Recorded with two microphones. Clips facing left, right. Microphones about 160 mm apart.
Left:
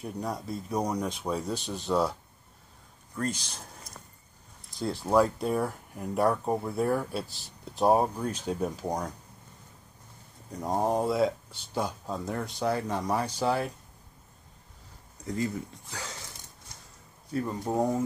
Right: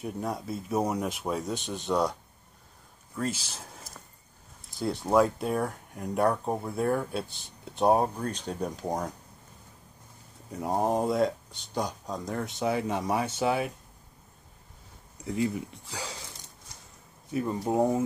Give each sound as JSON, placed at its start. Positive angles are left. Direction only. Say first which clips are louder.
{"t": 0.0, "sound": "speech", "louder": "right 1 dB", "side_deg": 0}
{"t": 3.2, "sound": "speech", "louder": "even", "side_deg": -5}
{"t": 10.5, "sound": "speech", "louder": "even", "side_deg": -5}
{"t": 15.2, "sound": "speech", "louder": "right 2 dB", "side_deg": -10}
{"t": 15.9, "sound": "a sound", "louder": "right 3 dB", "side_deg": -15}
{"t": 17.3, "sound": "speech", "louder": "right 2 dB", "side_deg": -15}